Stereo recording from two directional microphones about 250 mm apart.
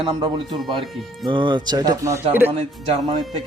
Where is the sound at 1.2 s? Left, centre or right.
Centre.